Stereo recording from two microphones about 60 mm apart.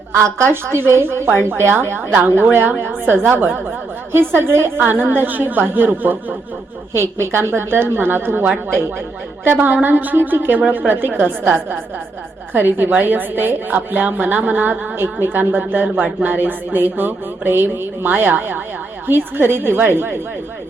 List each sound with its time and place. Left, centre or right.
0.5 s a woman's voice: right
6.9 s a woman's voice: right